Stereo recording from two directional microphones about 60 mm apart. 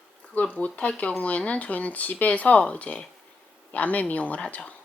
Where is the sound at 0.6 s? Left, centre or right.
Left.